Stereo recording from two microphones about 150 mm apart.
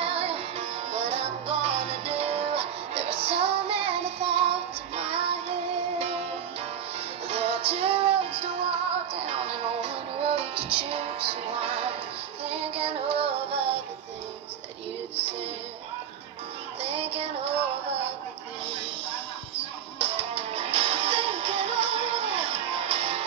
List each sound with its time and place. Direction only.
0.0 s music: 40° right (ahead or behind)
7.2 s music: 40° right (ahead or behind)
16.8 s music: 40° right (ahead or behind)
19.5 s music: 40° right (ahead or behind)